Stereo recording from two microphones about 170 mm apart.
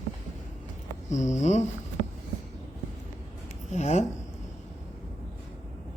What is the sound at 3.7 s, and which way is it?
Speech, 40° left (ahead or behind).